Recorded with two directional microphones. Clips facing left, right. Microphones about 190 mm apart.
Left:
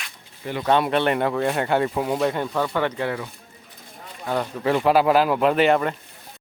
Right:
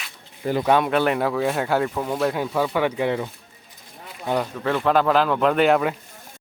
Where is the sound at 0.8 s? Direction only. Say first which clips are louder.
Even; centre (ahead or behind).